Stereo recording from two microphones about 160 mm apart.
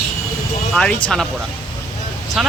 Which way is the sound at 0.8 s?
5° left (ahead or behind).